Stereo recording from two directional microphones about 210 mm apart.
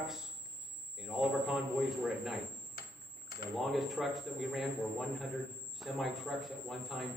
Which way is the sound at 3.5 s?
Centre (ahead or behind).